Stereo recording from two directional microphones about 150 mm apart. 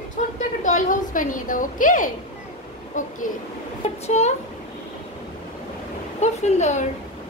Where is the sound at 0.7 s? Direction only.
60° left (ahead or behind).